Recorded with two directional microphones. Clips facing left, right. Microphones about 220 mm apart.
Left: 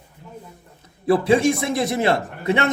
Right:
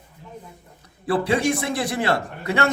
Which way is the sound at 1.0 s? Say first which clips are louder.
Left 4 dB; 20° left (ahead or behind).